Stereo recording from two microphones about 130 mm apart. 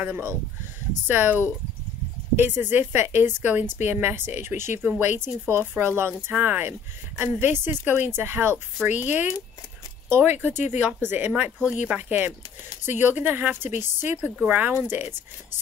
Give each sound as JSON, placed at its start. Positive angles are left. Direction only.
{"t": 0.0, "sound": "speech", "side_deg": -20}